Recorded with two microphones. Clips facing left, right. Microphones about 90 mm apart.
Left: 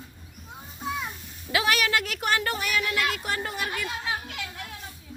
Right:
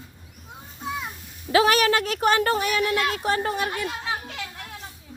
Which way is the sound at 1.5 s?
35° right (ahead or behind).